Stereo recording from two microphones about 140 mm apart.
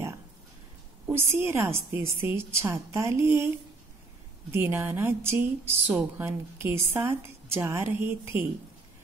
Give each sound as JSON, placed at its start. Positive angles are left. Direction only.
{"t": 1.0, "sound": "a woman's voice", "side_deg": -15}